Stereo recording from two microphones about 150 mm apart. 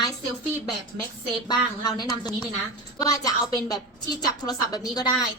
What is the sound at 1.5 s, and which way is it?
A woman's voice, 25° left (ahead or behind).